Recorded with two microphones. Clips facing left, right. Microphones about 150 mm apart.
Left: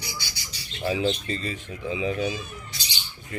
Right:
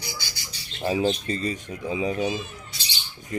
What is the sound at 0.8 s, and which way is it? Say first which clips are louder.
Speech: right 2 dB; 40° right (ahead or behind).